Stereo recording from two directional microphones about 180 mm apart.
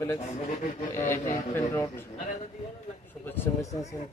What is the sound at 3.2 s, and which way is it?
Speech, 10° left (ahead or behind).